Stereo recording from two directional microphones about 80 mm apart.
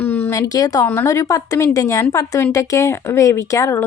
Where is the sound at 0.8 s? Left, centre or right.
Left.